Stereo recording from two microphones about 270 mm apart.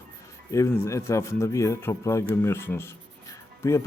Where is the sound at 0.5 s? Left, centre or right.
Centre.